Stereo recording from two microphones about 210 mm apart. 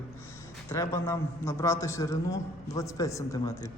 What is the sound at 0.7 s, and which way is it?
A man's voice, 15° left (ahead or behind).